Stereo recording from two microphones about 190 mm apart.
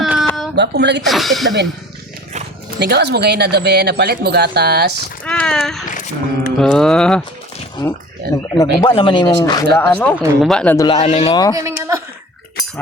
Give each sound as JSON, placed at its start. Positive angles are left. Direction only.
{"t": 0.0, "sound": "a sound", "side_deg": 0}
{"t": 0.5, "sound": "speech", "side_deg": -60}
{"t": 1.0, "sound": "speech", "side_deg": 0}
{"t": 2.7, "sound": "speech", "side_deg": -60}
{"t": 5.2, "sound": "speech", "side_deg": 5}
{"t": 5.9, "sound": "a sound", "side_deg": 45}
{"t": 6.6, "sound": "speech", "side_deg": 5}
{"t": 7.8, "sound": "speech", "side_deg": 25}
{"t": 9.7, "sound": "speech", "side_deg": 10}
{"t": 10.9, "sound": "speech", "side_deg": 30}
{"t": 11.5, "sound": "speech", "side_deg": -15}